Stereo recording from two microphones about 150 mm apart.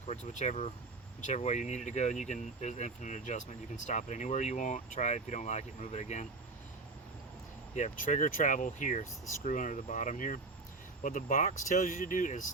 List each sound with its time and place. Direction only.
0.1 s speech: 50° left (ahead or behind)
7.8 s speech: 55° left (ahead or behind)